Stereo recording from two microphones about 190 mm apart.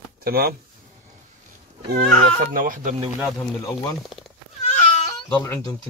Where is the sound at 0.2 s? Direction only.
55° right (ahead or behind).